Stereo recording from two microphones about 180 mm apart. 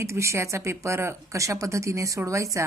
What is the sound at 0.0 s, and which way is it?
Speech, 15° right (ahead or behind).